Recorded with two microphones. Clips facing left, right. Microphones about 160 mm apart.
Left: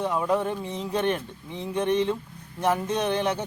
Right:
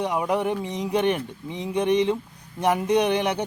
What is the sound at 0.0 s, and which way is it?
Speech, 15° right (ahead or behind).